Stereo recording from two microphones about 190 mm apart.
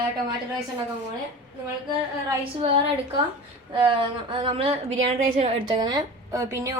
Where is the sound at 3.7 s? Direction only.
25° right (ahead or behind).